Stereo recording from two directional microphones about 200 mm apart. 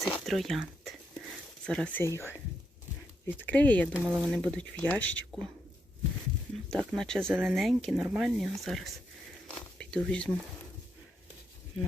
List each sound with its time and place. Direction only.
0.0 s speech: centre (ahead or behind)
2.0 s speech: 15° left (ahead or behind)
3.9 s speech: 5° right (ahead or behind)
6.7 s speech: centre (ahead or behind)